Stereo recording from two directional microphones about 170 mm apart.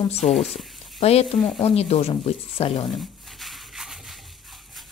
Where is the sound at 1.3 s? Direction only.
Centre (ahead or behind).